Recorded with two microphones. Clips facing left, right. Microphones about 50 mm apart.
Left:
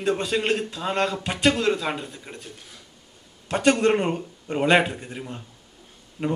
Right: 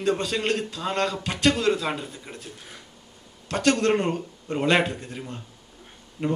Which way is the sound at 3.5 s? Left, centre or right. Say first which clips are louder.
Left 2 dB; centre.